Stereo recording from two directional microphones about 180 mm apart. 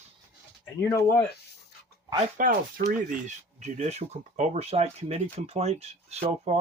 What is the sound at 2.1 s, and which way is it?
Speech, 45° right (ahead or behind).